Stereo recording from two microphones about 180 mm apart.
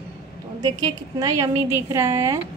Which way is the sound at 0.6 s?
20° right (ahead or behind).